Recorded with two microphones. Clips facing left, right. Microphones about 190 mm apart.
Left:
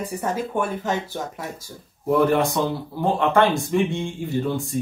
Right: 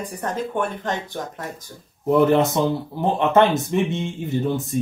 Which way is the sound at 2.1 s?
20° right (ahead or behind).